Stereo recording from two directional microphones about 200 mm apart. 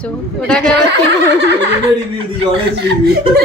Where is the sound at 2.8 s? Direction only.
55° right (ahead or behind).